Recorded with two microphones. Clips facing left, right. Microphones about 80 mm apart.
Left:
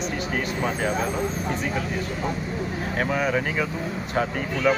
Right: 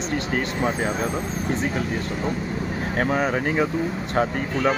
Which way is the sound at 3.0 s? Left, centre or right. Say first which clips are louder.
Right 2 dB; right.